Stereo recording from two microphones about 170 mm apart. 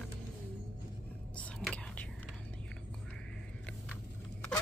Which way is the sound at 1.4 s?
10° left (ahead or behind).